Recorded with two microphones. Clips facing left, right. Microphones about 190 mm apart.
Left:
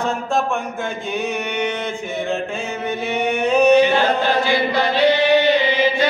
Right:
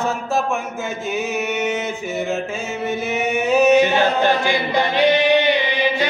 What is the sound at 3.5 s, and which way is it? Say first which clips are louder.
Chant: even; 5° right (ahead or behind).